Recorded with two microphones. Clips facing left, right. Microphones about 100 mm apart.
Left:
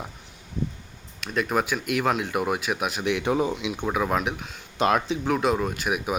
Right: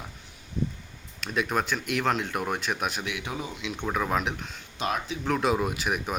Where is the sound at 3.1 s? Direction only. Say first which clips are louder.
Left 11 dB; 55° left (ahead or behind).